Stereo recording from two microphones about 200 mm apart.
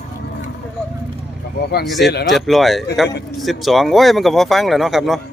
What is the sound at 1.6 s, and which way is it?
Speech, 55° left (ahead or behind).